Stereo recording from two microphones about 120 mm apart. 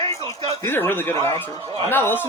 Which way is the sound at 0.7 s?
20° left (ahead or behind).